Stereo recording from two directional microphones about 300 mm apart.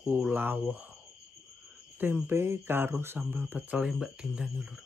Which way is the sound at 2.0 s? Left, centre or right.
Centre.